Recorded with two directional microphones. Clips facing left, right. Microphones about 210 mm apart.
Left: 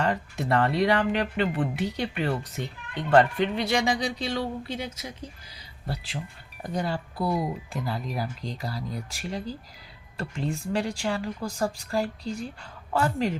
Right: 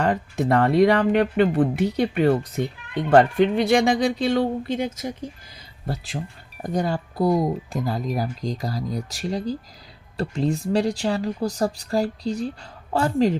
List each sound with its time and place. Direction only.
0.0 s speech: 50° right (ahead or behind)